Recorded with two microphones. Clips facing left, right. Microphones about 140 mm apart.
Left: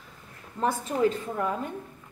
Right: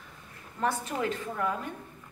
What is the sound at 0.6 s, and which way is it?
Speech, 25° left (ahead or behind).